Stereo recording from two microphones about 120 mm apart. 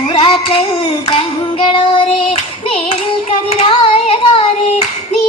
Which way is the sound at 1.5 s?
45° left (ahead or behind).